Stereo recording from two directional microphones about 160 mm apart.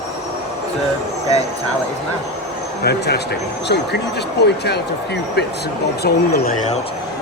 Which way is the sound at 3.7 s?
90° left.